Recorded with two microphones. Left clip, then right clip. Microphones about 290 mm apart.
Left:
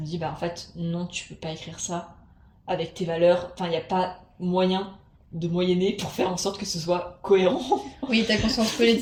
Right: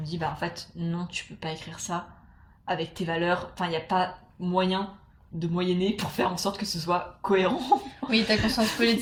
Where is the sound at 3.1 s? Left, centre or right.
Right.